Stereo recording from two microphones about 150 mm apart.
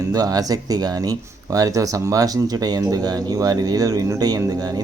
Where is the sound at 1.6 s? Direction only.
25° right (ahead or behind).